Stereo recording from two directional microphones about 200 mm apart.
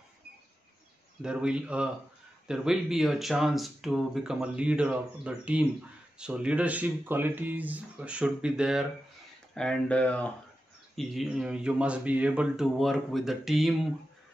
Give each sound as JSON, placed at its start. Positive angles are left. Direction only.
{"t": 1.2, "sound": "speech", "side_deg": -5}